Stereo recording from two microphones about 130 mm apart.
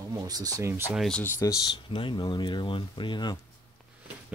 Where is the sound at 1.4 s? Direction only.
25° left (ahead or behind).